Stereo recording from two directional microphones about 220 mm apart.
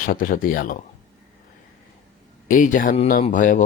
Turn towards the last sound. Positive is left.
turn(degrees=35)  # may be behind; listen again after turning